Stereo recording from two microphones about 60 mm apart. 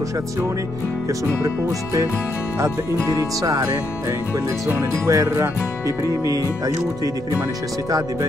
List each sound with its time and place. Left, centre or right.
5.0 s speech: right
5.3 s music: right